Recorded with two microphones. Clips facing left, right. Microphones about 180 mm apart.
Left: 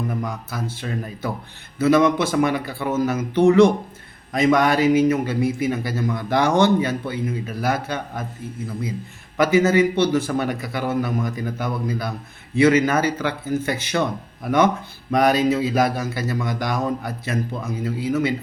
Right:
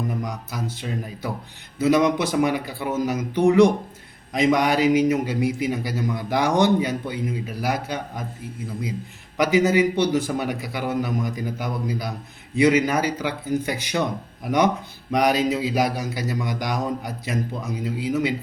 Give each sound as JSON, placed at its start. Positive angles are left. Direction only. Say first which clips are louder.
{"t": 0.2, "sound": "a man's voice", "louder": "left 2 dB", "side_deg": -15}
{"t": 9.4, "sound": "a man's voice", "louder": "left 2 dB", "side_deg": -15}